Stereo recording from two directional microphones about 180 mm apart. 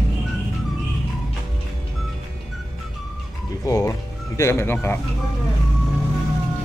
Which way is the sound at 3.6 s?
20° left (ahead or behind).